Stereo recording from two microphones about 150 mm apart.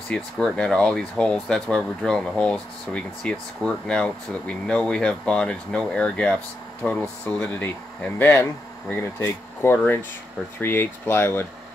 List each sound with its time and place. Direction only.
0.1 s speech: 5° left (ahead or behind)